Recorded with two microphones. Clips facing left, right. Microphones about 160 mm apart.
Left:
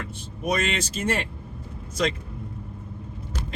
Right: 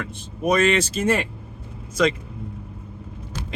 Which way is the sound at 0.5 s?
90° right.